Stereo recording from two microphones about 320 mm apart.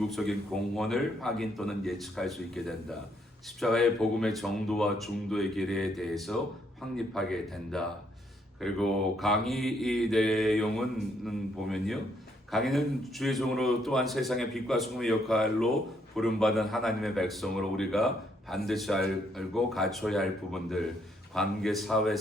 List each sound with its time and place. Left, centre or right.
0.1 s a man's voice: centre